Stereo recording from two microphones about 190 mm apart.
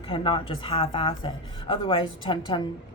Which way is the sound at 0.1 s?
30° left (ahead or behind).